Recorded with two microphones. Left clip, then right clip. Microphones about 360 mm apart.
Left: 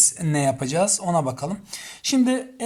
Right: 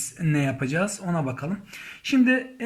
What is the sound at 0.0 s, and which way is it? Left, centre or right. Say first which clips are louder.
Speech: left 5 dB; centre.